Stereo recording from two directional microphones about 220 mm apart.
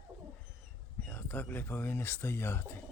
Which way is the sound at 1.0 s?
10° left (ahead or behind).